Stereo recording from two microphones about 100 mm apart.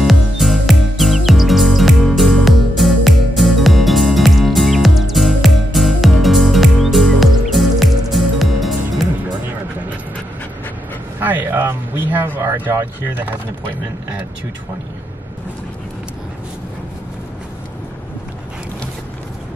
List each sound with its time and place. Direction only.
0.0 s music: centre (ahead or behind)
11.1 s vehicle: 20° right (ahead or behind)